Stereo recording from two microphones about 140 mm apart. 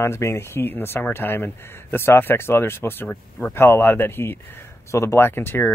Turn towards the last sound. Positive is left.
turn(degrees=15)  # may be behind; listen again after turning